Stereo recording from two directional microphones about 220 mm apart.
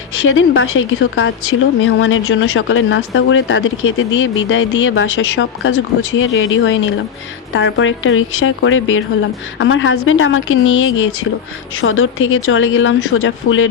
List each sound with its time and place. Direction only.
0.3 s a woman's voice: 65° left (ahead or behind)